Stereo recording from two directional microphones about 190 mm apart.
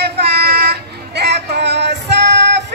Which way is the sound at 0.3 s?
60° right (ahead or behind).